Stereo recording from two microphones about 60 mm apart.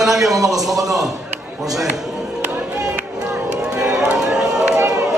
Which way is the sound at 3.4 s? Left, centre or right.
Centre.